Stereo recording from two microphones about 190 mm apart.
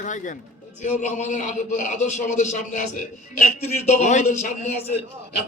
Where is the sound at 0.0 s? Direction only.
40° left (ahead or behind).